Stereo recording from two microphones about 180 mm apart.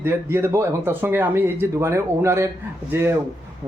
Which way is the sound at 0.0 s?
15° right (ahead or behind).